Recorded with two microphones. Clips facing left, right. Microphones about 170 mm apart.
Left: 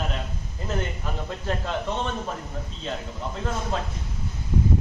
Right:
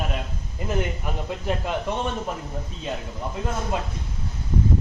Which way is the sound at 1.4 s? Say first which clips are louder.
Right 2 dB; 10° right (ahead or behind).